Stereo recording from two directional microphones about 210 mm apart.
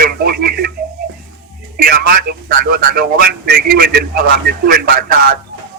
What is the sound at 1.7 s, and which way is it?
A man's voice, 45° right (ahead or behind).